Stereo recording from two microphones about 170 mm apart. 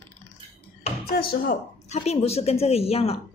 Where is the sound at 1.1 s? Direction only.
60° left (ahead or behind).